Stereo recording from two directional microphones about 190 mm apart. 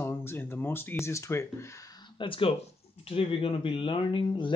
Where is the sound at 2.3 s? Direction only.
30° left (ahead or behind).